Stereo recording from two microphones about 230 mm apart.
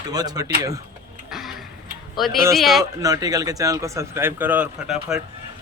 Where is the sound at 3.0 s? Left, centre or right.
Centre.